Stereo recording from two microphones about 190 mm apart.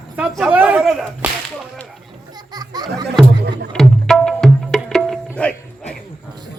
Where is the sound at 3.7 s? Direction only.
5° left (ahead or behind).